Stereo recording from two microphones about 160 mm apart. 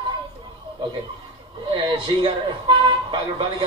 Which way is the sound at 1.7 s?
30° right (ahead or behind).